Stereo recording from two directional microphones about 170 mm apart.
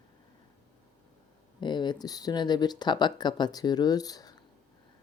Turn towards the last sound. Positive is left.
turn(degrees=20)  # may be behind; listen again after turning